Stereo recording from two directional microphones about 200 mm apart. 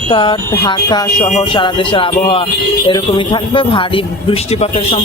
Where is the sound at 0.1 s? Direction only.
25° left (ahead or behind).